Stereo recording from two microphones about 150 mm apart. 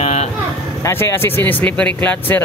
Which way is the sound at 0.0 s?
45° left (ahead or behind).